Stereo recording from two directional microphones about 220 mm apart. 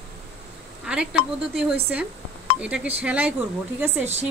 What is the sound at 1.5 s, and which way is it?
A woman's voice, centre (ahead or behind).